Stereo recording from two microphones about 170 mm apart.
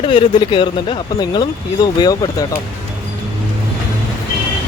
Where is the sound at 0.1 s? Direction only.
30° left (ahead or behind).